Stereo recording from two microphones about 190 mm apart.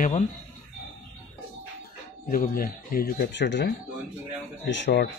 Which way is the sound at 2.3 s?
50° left (ahead or behind).